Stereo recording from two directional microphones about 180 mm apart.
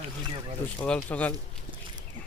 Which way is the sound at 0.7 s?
5° left (ahead or behind).